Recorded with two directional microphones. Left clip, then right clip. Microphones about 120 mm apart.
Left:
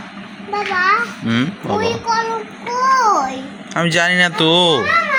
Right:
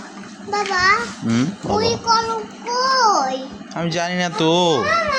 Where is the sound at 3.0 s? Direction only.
20° left (ahead or behind).